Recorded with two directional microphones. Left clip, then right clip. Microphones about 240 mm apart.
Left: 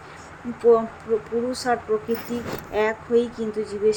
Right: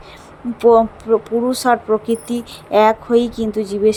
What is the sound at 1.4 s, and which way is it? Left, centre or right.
Speech, right.